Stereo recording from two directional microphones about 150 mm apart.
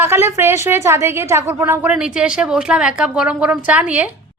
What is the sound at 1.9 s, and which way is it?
A woman's voice, 5° right (ahead or behind).